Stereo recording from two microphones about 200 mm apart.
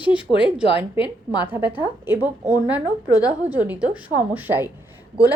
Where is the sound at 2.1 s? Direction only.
10° right (ahead or behind).